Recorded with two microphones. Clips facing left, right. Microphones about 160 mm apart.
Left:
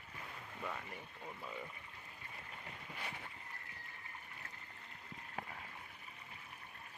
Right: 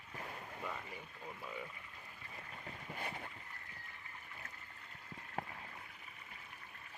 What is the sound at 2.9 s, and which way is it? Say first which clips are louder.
Boat: right 4 dB; 45° right (ahead or behind).